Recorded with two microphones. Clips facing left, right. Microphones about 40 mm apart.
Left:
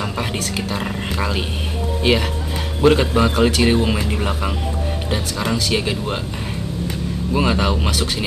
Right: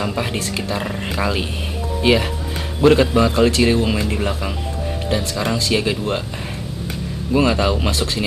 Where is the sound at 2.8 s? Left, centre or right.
Centre.